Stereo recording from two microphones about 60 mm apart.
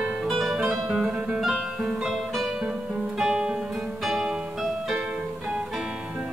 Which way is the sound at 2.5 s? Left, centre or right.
Centre.